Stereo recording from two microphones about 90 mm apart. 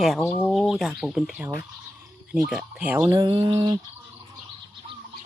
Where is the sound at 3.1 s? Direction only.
50° right (ahead or behind).